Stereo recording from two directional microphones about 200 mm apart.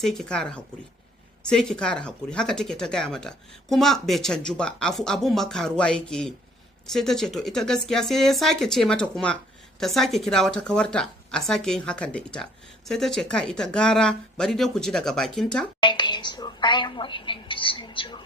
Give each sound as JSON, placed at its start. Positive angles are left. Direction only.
{"t": 0.0, "sound": "speech", "side_deg": 5}
{"t": 15.8, "sound": "a woman's voice", "side_deg": 25}